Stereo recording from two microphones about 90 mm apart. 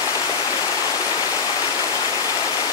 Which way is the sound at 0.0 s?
40° left (ahead or behind).